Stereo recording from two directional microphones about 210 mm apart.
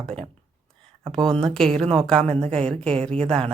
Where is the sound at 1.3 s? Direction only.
Centre (ahead or behind).